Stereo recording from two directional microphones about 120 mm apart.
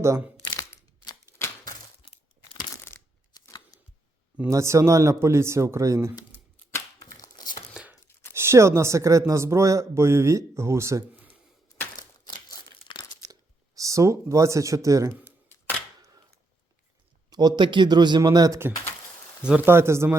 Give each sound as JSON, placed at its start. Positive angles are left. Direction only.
{"t": 0.7, "sound": "typewriter", "side_deg": 25}
{"t": 2.9, "sound": "a sound", "side_deg": 20}
{"t": 4.4, "sound": "a man's voice", "side_deg": -25}
{"t": 7.0, "sound": "a sound", "side_deg": 30}
{"t": 7.7, "sound": "tearing", "side_deg": -5}
{"t": 8.4, "sound": "a man's voice", "side_deg": -20}
{"t": 11.1, "sound": "a sound", "side_deg": -10}
{"t": 11.9, "sound": "crumpling", "side_deg": 35}
{"t": 13.7, "sound": "a man's voice", "side_deg": -25}
{"t": 15.1, "sound": "camera", "side_deg": 15}
{"t": 17.2, "sound": "a man's voice", "side_deg": -35}
{"t": 19.4, "sound": "speech", "side_deg": -10}
{"t": 19.6, "sound": "a man's voice", "side_deg": -20}